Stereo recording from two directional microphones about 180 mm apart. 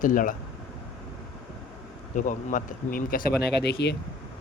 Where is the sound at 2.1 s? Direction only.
45° left (ahead or behind); by 3.9 s 70° left (ahead or behind).